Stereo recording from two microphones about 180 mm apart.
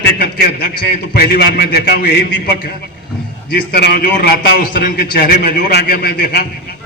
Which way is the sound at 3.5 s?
65° left (ahead or behind).